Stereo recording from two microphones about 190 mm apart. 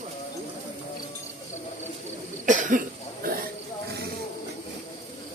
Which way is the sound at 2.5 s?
40° right (ahead or behind).